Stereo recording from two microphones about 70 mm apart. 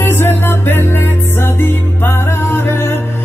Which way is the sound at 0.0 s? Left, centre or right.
Left.